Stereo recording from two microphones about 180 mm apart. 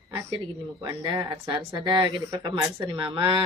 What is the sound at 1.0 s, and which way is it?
Speech, 25° right (ahead or behind).